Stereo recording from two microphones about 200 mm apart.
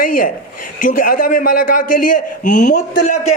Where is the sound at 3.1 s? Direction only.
90° left.